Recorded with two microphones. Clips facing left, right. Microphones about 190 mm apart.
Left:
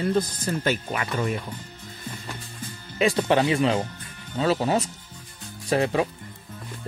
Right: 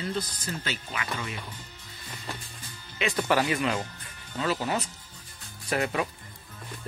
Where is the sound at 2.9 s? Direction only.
30° left (ahead or behind).